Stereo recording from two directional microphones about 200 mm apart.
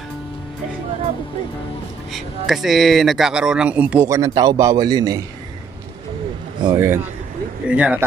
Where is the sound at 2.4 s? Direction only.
Centre (ahead or behind); by 5.2 s 20° right (ahead or behind).